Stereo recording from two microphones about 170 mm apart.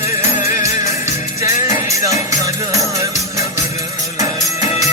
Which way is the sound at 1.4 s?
20° right (ahead or behind).